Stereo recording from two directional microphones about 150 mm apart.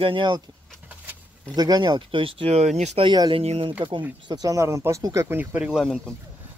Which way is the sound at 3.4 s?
45° right (ahead or behind).